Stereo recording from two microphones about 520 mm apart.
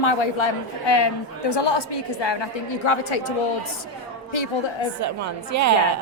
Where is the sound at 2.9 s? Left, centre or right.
Left.